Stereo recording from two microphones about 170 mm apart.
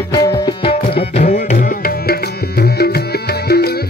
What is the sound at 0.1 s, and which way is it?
Music, 20° left (ahead or behind).